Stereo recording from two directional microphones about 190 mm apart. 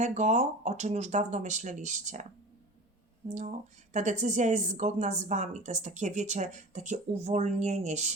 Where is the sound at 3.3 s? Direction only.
40° right (ahead or behind).